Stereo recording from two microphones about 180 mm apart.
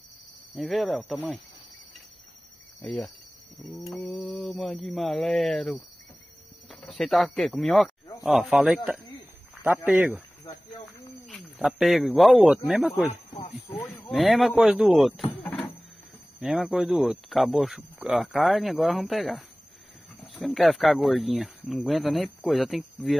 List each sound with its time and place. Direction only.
0.6 s speech: centre (ahead or behind)
2.8 s speech: centre (ahead or behind)
11.2 s speech: centre (ahead or behind)
13.1 s snake: 40° left (ahead or behind)
13.8 s speech: 15° left (ahead or behind)
14.1 s speech: centre (ahead or behind)
15.4 s a sound: 10° left (ahead or behind)
16.3 s speech: 5° right (ahead or behind)